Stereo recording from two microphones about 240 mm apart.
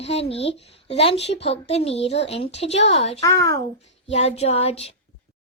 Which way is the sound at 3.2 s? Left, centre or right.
Centre.